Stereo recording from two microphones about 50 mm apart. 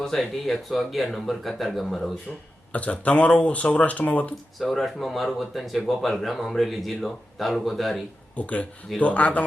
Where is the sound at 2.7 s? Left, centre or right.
Left.